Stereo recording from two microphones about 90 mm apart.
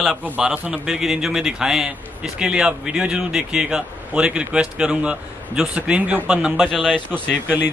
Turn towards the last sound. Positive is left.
turn(degrees=-20)  # may be behind; listen again after turning